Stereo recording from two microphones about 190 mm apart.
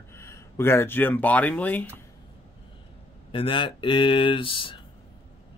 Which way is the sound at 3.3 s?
25° left (ahead or behind).